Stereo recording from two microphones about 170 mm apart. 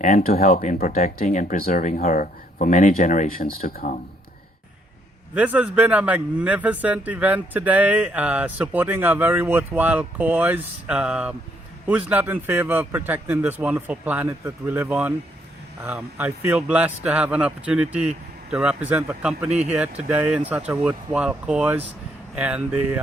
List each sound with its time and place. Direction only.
0.0 s speech: 55° left (ahead or behind)
1.2 s speech: 45° left (ahead or behind)
5.3 s speech: 10° right (ahead or behind)
19.5 s speech: 40° right (ahead or behind)
19.7 s speech: 10° right (ahead or behind)